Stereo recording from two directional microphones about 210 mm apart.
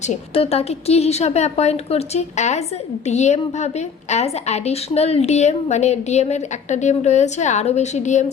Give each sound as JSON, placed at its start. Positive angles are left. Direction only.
{"t": 0.0, "sound": "a woman's voice", "side_deg": 30}